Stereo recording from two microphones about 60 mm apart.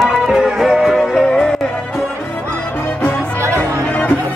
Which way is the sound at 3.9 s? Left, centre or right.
Left.